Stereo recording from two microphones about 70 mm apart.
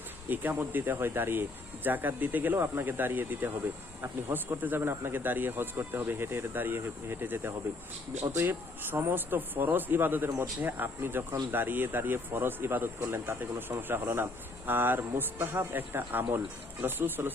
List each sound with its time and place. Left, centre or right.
0.3 s speech: right